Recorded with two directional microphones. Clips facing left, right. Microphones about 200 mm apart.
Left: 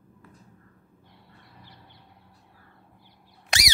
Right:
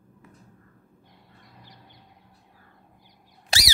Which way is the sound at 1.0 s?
15° right (ahead or behind).